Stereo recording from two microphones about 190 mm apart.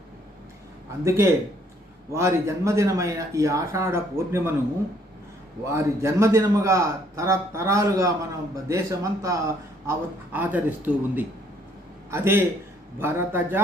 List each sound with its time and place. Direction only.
1.0 s a man's voice: 15° right (ahead or behind)
5.6 s a man's voice: 15° right (ahead or behind)